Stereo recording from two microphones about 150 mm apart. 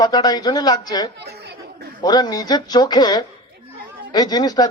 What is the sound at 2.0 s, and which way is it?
A man's voice, 30° left (ahead or behind).